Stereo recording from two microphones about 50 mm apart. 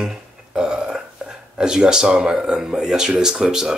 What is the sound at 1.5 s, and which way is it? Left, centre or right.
Speech, centre.